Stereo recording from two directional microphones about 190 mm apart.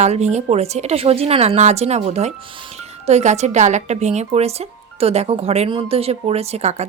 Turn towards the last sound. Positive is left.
turn(degrees=-35)  # may be behind; listen again after turning